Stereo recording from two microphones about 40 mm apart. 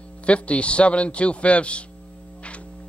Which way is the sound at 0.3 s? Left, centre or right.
Left.